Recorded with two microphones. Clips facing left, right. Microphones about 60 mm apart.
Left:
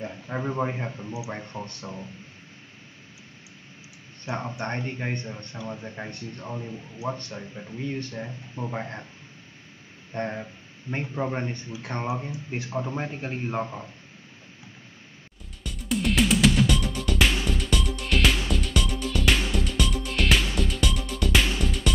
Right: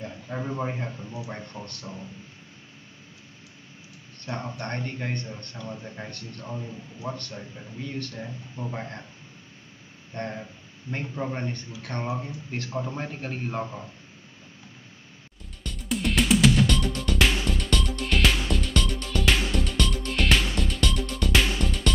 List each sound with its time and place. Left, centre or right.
0.0 s speech: centre
4.2 s speech: left
10.1 s speech: centre
15.6 s music: centre